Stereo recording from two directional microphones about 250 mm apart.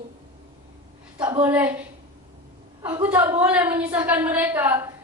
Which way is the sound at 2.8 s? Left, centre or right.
Centre.